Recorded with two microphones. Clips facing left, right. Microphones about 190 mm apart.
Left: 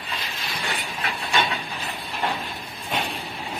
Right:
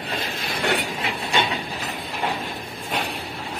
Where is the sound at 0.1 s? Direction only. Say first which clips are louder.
Right 4 dB; 55° right (ahead or behind).